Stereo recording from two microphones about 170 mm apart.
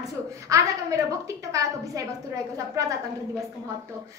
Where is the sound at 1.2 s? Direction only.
20° right (ahead or behind).